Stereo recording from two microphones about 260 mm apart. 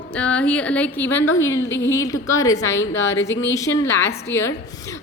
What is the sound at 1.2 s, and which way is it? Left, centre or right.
Speech, left.